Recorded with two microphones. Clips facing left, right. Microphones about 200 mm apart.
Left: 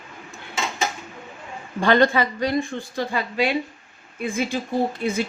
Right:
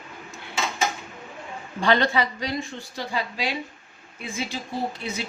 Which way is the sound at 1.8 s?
50° left (ahead or behind).